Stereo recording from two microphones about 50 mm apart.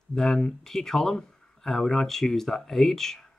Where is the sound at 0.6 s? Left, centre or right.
Centre.